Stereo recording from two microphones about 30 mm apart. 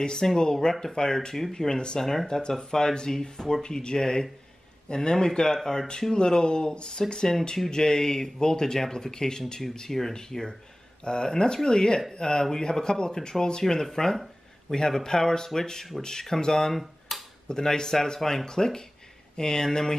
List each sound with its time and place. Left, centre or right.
0.4 s speech: left
2.0 s speech: centre
2.2 s speech: left
9.8 s speech: centre
10.1 s speech: left
16.7 s finger snapping: centre
17.5 s speech: left